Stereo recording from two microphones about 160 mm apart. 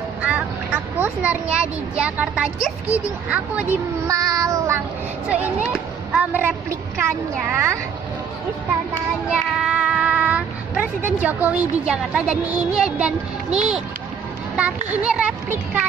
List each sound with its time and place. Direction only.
0.9 s speech: 10° right (ahead or behind)
4.1 s child singing: 20° right (ahead or behind)
5.4 s a child's voice: 5° right (ahead or behind)
7.5 s speech: 15° right (ahead or behind)
9.3 s speech: 5° right (ahead or behind)